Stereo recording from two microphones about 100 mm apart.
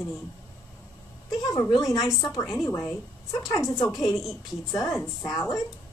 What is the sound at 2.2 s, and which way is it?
Speech, centre (ahead or behind).